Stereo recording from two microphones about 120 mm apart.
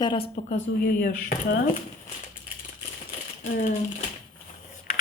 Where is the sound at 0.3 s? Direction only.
70° left (ahead or behind).